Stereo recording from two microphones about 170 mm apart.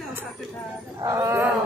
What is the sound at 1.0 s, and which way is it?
Speech, 20° right (ahead or behind).